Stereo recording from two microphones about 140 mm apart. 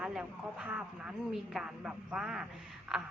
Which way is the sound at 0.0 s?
5° right (ahead or behind).